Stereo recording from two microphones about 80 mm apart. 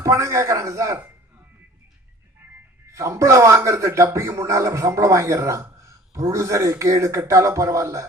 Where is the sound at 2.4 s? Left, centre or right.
Right.